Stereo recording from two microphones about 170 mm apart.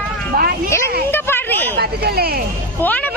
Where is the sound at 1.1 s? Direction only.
10° left (ahead or behind).